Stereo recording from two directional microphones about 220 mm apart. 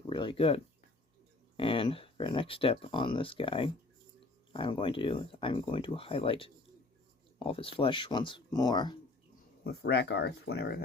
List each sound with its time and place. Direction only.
0.1 s speech: 20° left (ahead or behind)
9.6 s speech: 50° left (ahead or behind)